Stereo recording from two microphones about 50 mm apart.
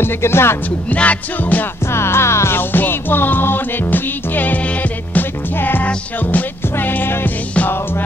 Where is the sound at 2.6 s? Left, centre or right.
Left.